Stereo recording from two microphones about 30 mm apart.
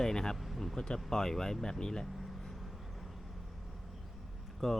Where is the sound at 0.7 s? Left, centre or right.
Left.